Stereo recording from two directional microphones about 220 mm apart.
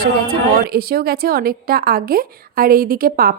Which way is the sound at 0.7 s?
45° right (ahead or behind).